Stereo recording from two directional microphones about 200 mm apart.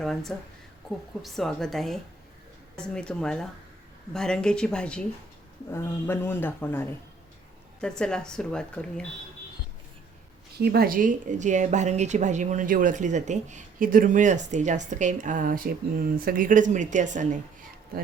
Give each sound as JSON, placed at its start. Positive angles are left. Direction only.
{"t": 0.3, "sound": "a man's voice", "side_deg": 5}
{"t": 10.6, "sound": "a woman's voice", "side_deg": -50}